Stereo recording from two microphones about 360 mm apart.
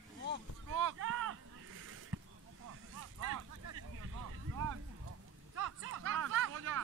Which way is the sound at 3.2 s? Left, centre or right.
Right.